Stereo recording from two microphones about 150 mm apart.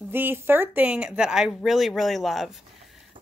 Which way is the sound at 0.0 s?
15° right (ahead or behind).